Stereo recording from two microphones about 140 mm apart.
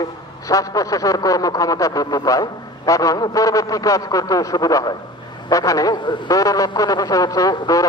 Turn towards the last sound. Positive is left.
turn(degrees=25)  # may be behind; listen again after turning